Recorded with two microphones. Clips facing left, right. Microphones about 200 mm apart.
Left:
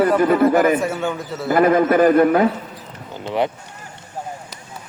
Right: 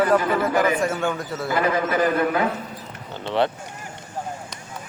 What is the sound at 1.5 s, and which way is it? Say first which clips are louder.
Speech: left 8 dB; 50° left (ahead or behind).